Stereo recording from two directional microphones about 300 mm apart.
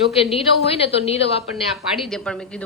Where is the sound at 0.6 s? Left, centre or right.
Centre.